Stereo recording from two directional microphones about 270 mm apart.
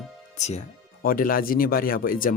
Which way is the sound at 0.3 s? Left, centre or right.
Left.